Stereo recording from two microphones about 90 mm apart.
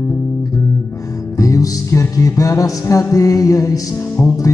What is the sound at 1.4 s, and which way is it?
Music, 40° left (ahead or behind).